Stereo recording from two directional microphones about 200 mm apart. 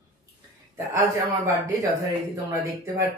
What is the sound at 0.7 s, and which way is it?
Speech, 15° right (ahead or behind).